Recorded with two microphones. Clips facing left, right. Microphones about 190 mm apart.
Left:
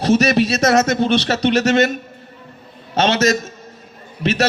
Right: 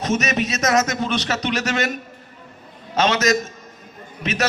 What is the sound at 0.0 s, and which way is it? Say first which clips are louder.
Speech: left 7 dB; 35° left (ahead or behind).